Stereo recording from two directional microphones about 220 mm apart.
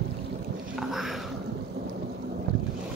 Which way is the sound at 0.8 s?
Centre (ahead or behind).